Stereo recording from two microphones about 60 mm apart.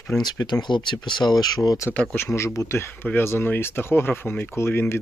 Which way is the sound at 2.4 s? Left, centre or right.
Left.